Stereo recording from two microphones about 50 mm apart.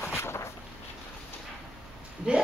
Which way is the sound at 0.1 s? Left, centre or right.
Left.